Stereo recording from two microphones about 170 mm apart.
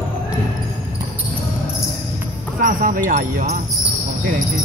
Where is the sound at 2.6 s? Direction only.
55° right (ahead or behind).